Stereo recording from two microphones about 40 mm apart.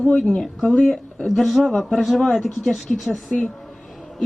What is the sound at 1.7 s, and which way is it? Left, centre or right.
A woman's voice, centre.